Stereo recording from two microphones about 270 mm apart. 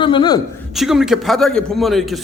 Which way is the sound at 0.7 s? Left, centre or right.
Centre.